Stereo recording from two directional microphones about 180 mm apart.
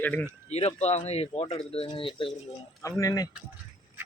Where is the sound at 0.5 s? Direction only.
35° left (ahead or behind).